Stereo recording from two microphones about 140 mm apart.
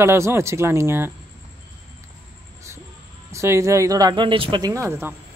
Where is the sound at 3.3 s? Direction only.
20° right (ahead or behind); by 4.7 s 35° right (ahead or behind).